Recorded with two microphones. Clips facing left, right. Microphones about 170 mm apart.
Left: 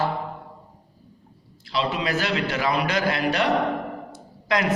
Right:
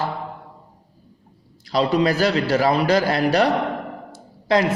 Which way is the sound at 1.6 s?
40° right (ahead or behind).